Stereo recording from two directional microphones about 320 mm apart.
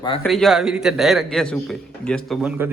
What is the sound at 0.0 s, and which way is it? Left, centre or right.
Speech, centre.